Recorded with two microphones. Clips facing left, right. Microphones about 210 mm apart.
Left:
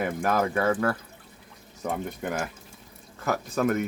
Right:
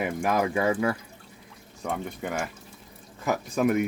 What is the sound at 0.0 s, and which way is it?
Speech, 10° right (ahead or behind).